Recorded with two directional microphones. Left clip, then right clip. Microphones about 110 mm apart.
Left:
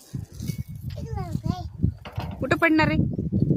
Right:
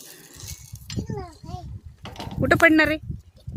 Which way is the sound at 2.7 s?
25° right (ahead or behind).